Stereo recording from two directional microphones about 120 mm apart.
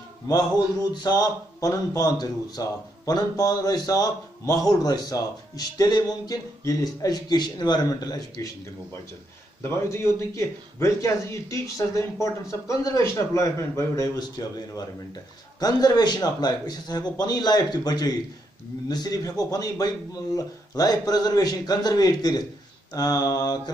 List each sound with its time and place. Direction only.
1.0 s speech: 35° left (ahead or behind)
9.6 s a man's voice: 20° left (ahead or behind)